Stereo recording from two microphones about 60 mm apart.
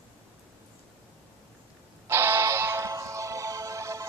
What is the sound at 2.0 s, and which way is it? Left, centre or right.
Music, right.